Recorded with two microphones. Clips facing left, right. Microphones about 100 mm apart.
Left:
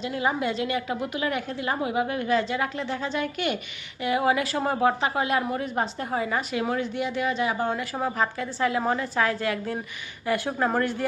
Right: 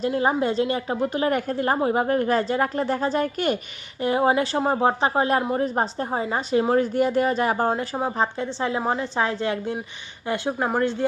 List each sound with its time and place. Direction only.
0.1 s a woman's voice: 35° right (ahead or behind)
7.9 s a woman's voice: 25° right (ahead or behind)